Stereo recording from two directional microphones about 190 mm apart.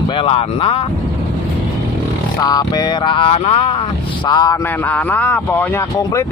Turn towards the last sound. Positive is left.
turn(degrees=10)  # may be behind; listen again after turning